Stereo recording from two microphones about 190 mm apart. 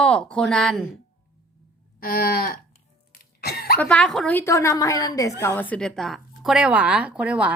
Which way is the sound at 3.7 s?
5° left (ahead or behind).